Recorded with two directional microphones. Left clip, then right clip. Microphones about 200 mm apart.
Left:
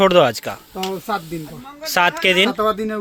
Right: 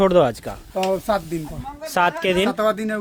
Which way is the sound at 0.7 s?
30° right (ahead or behind).